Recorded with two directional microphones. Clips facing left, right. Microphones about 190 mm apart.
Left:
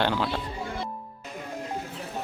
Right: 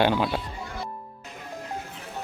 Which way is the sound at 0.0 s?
20° right (ahead or behind).